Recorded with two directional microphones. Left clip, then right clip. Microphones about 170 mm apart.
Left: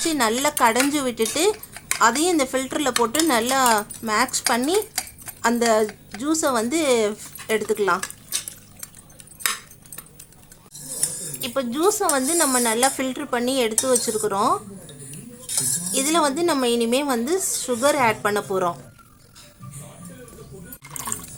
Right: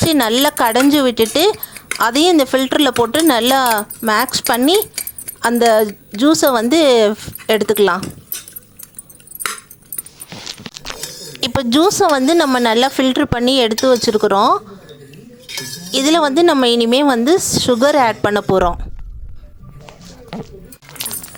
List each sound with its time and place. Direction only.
0.1 s speech: 40° right (ahead or behind)
11.3 s a woman's voice: 55° right (ahead or behind)
15.9 s speech: 40° right (ahead or behind)